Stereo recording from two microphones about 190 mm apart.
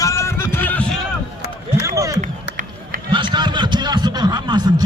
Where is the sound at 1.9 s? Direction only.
15° right (ahead or behind).